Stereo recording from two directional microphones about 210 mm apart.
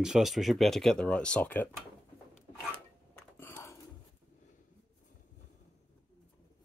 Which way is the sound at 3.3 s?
10° left (ahead or behind).